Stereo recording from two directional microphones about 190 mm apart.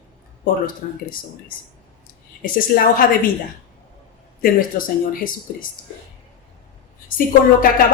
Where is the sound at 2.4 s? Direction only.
50° left (ahead or behind).